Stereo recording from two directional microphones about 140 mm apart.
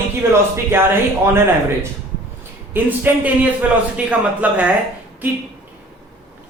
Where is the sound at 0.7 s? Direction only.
15° right (ahead or behind).